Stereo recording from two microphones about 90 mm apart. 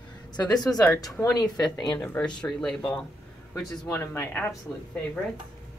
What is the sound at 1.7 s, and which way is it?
Speech, 55° left (ahead or behind).